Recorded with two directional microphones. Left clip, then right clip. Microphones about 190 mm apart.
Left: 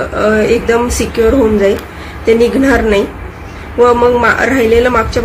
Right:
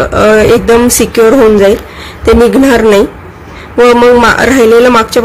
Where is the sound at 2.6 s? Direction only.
50° right (ahead or behind).